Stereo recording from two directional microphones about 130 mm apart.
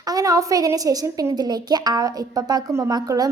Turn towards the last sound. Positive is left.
turn(degrees=-30)  # may be behind; listen again after turning